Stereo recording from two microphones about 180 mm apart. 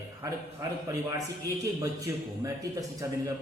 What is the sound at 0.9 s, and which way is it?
A man's voice, 20° right (ahead or behind).